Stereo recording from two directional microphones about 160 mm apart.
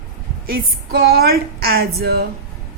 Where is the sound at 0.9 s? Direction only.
85° right.